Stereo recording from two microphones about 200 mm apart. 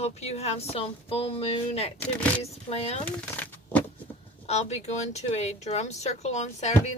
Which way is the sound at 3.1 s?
10° left (ahead or behind).